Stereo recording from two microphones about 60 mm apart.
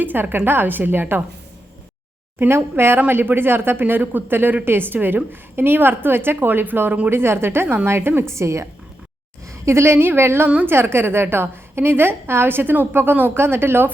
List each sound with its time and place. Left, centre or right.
0.0 s speech: right
2.4 s a woman's voice: right